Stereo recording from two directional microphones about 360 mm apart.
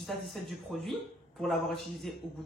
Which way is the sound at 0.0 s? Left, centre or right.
Centre.